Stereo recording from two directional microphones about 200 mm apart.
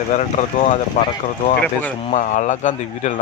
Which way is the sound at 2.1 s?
35° left (ahead or behind).